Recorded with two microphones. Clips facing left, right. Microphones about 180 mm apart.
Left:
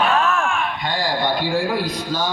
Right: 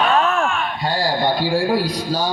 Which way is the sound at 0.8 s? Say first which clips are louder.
Right 3 dB; 35° right (ahead or behind).